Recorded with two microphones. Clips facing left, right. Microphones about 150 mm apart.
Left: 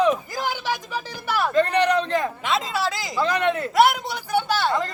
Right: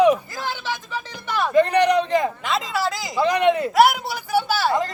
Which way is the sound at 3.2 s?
15° right (ahead or behind).